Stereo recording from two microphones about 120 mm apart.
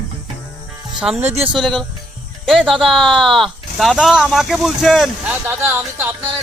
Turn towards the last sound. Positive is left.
turn(degrees=-15)  # may be behind; listen again after turning